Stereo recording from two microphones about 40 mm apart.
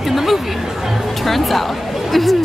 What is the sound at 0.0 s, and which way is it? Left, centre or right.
Chatter, centre.